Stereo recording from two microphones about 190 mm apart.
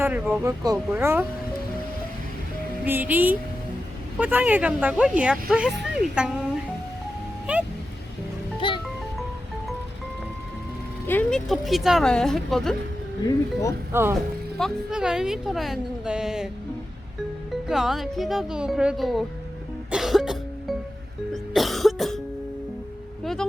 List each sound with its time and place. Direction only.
0.0 s speech: 10° right (ahead or behind)
2.8 s a woman's voice: 10° right (ahead or behind)
7.5 s music: 5° right (ahead or behind)
8.6 s music: 25° left (ahead or behind)
11.0 s a woman's voice: 10° left (ahead or behind)
13.2 s speech: 15° left (ahead or behind)
13.9 s speech: 15° right (ahead or behind)
14.6 s a woman's voice: 5° right (ahead or behind)
17.7 s a woman's voice: centre (ahead or behind)
19.9 s music: centre (ahead or behind)
21.3 s cough: centre (ahead or behind)
23.2 s a sound: centre (ahead or behind)